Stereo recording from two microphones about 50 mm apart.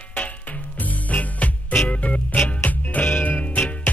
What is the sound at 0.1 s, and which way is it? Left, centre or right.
Music, left.